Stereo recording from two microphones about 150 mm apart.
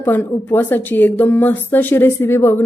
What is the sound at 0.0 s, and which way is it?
A woman's voice, 15° left (ahead or behind).